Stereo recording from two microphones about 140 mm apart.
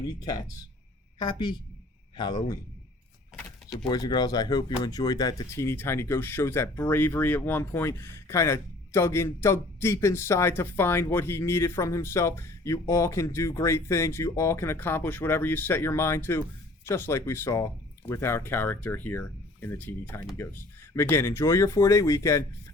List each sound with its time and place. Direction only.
1.2 s a man's voice: 35° left (ahead or behind)
3.8 s speech: 30° left (ahead or behind)